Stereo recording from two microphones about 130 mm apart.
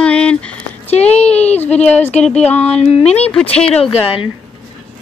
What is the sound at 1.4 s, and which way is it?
Speech, 55° left (ahead or behind).